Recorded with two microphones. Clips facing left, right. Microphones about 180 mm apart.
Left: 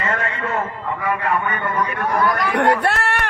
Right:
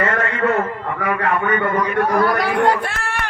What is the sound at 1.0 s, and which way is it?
A man's voice, 70° right (ahead or behind).